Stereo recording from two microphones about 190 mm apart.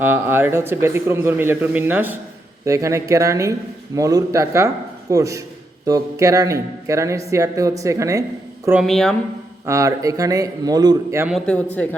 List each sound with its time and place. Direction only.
0.0 s speech: 10° right (ahead or behind)
8.8 s a woman's voice: centre (ahead or behind)
9.6 s speech: 15° right (ahead or behind)
11.3 s a man's voice: 5° left (ahead or behind)